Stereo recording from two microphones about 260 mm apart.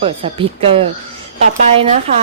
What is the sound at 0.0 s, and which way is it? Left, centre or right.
A woman's voice, right.